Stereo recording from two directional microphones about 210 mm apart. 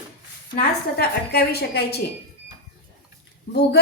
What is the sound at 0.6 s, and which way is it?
A woman's voice, 50° left (ahead or behind).